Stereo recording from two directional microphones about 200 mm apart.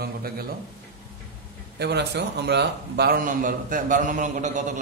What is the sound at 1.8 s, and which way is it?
A man's voice, 55° right (ahead or behind).